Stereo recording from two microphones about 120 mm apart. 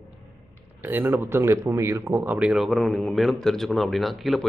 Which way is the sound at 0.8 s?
15° right (ahead or behind).